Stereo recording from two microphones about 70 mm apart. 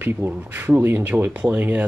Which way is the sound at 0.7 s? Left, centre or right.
Right.